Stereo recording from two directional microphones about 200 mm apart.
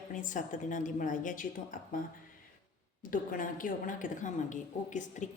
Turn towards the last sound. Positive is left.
turn(degrees=40)  # may be behind; listen again after turning